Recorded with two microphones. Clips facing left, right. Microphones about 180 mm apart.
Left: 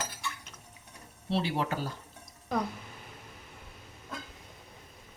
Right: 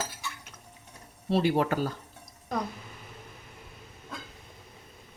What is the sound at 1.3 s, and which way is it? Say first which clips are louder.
Speech: right 6 dB; 50° right (ahead or behind).